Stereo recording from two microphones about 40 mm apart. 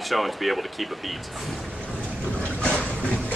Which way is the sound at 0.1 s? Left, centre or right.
Centre.